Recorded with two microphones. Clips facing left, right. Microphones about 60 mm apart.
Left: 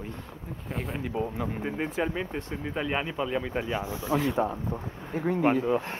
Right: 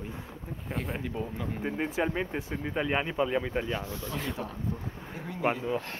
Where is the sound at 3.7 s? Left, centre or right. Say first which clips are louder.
Left 3 dB; centre.